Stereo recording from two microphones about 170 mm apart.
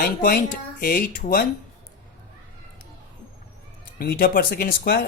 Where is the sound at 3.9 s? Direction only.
65° left (ahead or behind).